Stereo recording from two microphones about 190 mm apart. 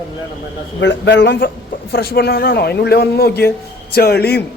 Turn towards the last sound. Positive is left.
turn(degrees=55)  # may be behind; listen again after turning